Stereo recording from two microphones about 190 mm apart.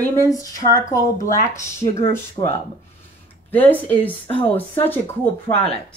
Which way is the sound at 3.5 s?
10° left (ahead or behind).